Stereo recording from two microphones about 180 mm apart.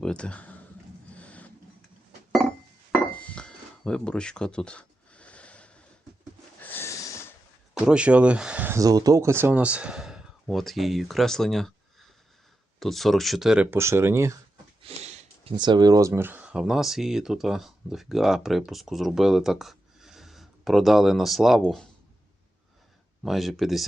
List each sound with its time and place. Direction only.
0.0 s speech: 5° left (ahead or behind)
1.1 s printer: 5° left (ahead or behind)
3.2 s a sound: 5° left (ahead or behind)
6.6 s snort: 10° left (ahead or behind)
7.8 s speech: 5° right (ahead or behind)
14.8 s sniff: 35° right (ahead or behind)
15.5 s speech: 25° right (ahead or behind); by 21.8 s centre (ahead or behind)
23.2 s speech: centre (ahead or behind)